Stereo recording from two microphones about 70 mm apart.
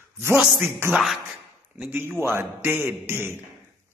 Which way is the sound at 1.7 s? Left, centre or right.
Right.